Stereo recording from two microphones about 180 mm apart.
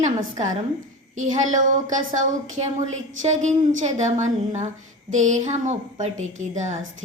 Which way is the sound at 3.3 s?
40° right (ahead or behind).